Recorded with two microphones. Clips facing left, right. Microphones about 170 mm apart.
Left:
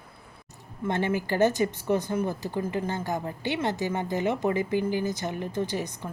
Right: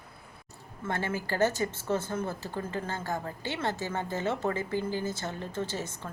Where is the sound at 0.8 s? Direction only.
15° left (ahead or behind).